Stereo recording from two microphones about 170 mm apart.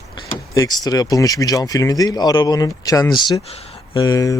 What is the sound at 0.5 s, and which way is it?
Speech, 20° left (ahead or behind).